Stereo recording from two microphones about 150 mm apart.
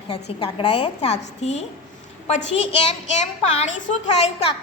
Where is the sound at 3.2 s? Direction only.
50° left (ahead or behind).